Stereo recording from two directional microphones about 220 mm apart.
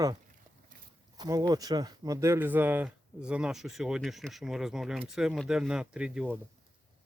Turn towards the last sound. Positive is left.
turn(degrees=-5)  # may be behind; listen again after turning